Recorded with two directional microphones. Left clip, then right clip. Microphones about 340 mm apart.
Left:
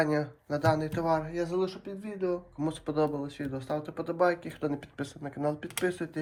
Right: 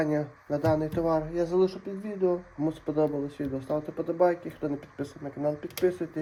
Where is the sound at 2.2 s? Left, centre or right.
Centre.